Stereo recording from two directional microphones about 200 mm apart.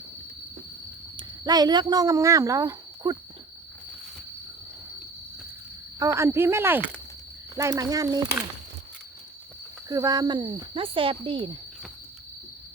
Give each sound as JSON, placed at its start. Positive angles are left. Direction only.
{"t": 1.1, "sound": "speech", "side_deg": -20}
{"t": 6.0, "sound": "speech", "side_deg": -15}
{"t": 9.9, "sound": "speech", "side_deg": -15}